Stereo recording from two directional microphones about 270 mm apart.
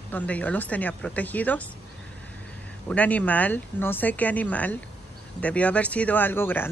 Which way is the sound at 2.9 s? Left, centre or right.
Centre.